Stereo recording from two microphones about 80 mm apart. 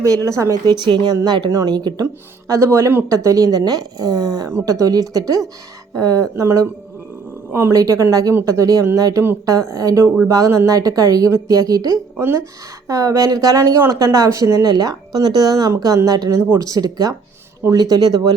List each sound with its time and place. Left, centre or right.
0.0 s speech: right
0.6 s a woman's voice: right
1.7 s a woman's voice: right
2.5 s speech: right
7.8 s speech: right
16.3 s speech: right